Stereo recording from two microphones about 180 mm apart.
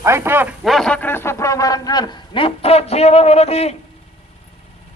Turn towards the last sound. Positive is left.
turn(degrees=35)  # may be behind; listen again after turning